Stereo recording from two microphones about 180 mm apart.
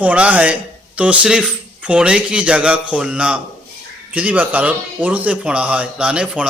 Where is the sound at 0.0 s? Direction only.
10° right (ahead or behind).